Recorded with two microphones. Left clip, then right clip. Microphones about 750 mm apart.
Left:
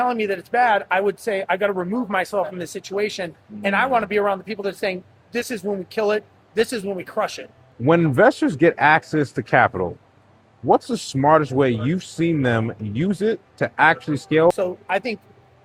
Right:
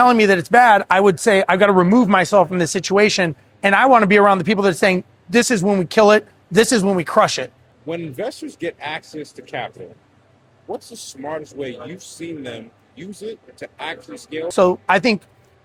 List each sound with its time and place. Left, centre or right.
0.0 s speech: right
7.9 s speech: left
13.6 s speech: left
14.5 s speech: right